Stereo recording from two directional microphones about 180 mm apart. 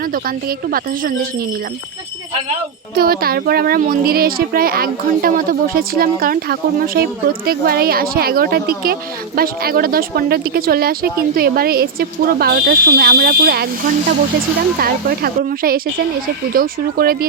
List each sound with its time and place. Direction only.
0.1 s speech: 55° right (ahead or behind)
2.9 s speech: 55° right (ahead or behind)